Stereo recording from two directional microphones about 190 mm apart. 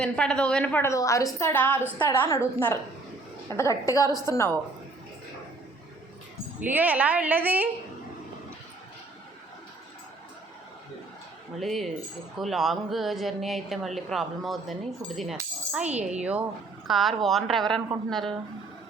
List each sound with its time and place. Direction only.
0.0 s a woman's voice: 5° left (ahead or behind)
6.6 s speech: 10° right (ahead or behind)
11.6 s speech: centre (ahead or behind)
15.9 s a woman's voice: 35° right (ahead or behind)
16.8 s a woman's voice: centre (ahead or behind)